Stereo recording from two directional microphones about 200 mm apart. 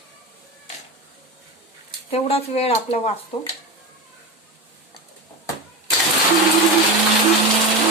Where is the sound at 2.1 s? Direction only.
30° left (ahead or behind).